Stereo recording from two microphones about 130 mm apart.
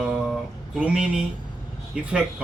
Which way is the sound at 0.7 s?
10° right (ahead or behind).